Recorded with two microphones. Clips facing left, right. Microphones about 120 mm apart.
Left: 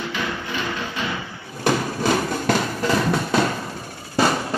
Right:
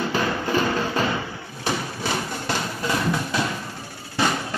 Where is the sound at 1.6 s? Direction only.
50° left (ahead or behind).